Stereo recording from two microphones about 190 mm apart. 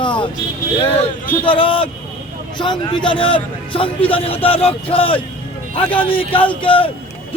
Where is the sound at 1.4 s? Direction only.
25° left (ahead or behind).